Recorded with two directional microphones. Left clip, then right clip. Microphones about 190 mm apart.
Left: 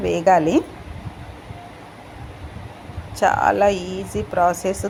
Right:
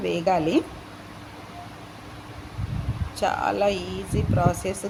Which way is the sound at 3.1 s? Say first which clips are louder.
Left 7 dB; 15° left (ahead or behind).